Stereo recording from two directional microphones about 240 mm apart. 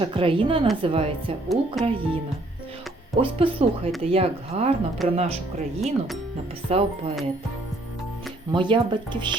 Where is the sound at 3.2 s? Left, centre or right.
Right.